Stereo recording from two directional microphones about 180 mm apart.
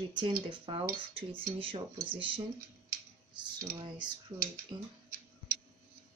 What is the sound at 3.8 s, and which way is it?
Speech, 25° right (ahead or behind).